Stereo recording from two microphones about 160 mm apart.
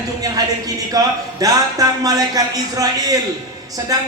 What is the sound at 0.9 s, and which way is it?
Speech, 20° right (ahead or behind).